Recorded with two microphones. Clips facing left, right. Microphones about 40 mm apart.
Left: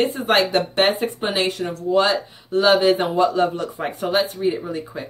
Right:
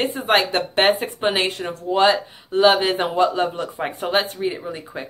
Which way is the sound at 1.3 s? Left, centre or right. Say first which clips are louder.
Left 1 dB; right.